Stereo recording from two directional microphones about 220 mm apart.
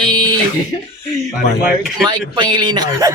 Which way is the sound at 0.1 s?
20° right (ahead or behind).